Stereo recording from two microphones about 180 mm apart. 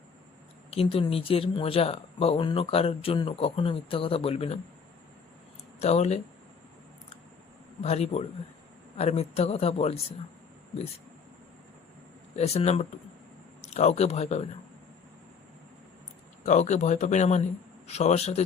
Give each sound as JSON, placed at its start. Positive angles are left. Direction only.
{"t": 0.7, "sound": "speech", "side_deg": 30}
{"t": 5.8, "sound": "speech", "side_deg": 35}
{"t": 7.8, "sound": "speech", "side_deg": 35}
{"t": 12.4, "sound": "speech", "side_deg": 35}
{"t": 16.5, "sound": "speech", "side_deg": 40}